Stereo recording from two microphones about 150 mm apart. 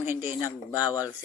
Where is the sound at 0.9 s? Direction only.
25° left (ahead or behind).